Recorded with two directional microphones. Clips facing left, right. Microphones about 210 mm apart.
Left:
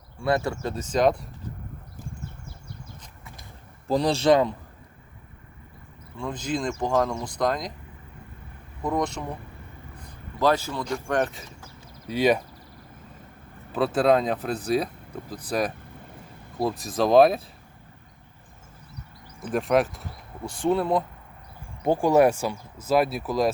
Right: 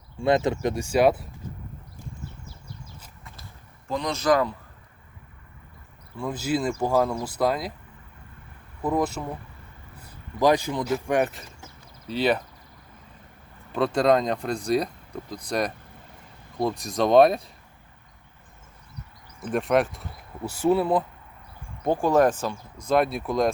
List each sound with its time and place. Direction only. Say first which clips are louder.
0.2 s speech: right 3 dB; 20° right (ahead or behind)
3.8 s a man's voice: left 3 dB; 35° left (ahead or behind)
6.1 s speech: right 3 dB; 5° right (ahead or behind)
8.8 s speech: right 2 dB; 5° right (ahead or behind)
10.0 s a sound: right 2 dB; 10° right (ahead or behind)
10.8 s speech: right 1 dB; 5° right (ahead or behind)
12.0 s speech: left 2 dB; 10° left (ahead or behind)
13.7 s speech: even; 5° left (ahead or behind)
19.4 s speech: even; centre (ahead or behind)
21.8 s speech: left 1 dB; 10° left (ahead or behind)